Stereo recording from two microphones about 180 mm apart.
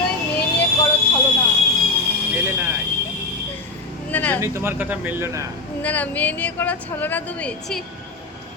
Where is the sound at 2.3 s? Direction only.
10° right (ahead or behind).